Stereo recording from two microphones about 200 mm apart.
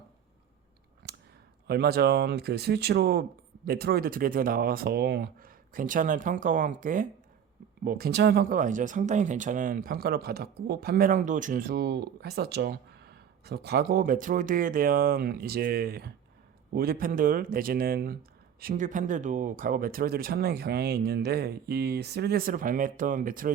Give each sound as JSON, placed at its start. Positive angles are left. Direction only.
{"t": 1.6, "sound": "speech", "side_deg": -55}